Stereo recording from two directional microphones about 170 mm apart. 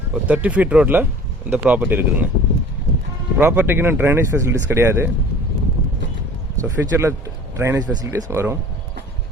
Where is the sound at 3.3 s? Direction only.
10° right (ahead or behind).